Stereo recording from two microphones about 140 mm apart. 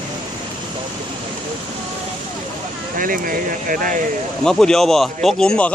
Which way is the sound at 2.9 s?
85° right.